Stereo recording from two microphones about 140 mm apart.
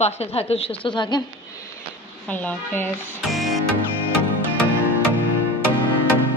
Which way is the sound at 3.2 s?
Centre (ahead or behind).